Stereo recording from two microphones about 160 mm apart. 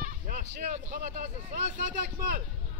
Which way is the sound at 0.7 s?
55° right (ahead or behind).